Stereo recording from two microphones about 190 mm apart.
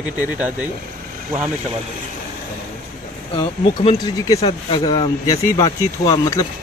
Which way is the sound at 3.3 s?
25° left (ahead or behind).